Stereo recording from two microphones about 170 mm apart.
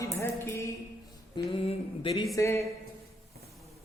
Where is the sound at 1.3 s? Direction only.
35° left (ahead or behind).